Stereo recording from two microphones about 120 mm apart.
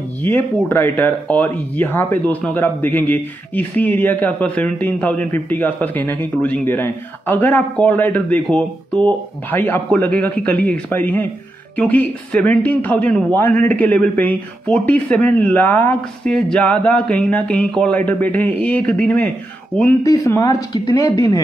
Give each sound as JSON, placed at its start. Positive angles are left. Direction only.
{"t": 0.7, "sound": "a man's voice", "side_deg": 15}
{"t": 20.0, "sound": "speech", "side_deg": 25}